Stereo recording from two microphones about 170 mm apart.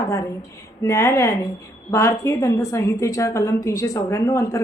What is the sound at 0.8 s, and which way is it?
A woman's voice, 15° left (ahead or behind).